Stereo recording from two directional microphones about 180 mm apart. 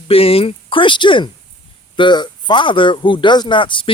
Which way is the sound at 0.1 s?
30° left (ahead or behind).